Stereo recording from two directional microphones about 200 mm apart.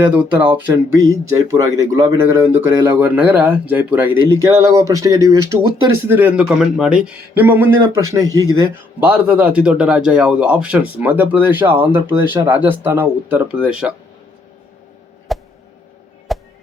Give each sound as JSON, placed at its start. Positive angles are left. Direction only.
{"t": 0.0, "sound": "a man's voice", "side_deg": -5}
{"t": 15.3, "sound": "a sound", "side_deg": 0}
{"t": 16.3, "sound": "music", "side_deg": 0}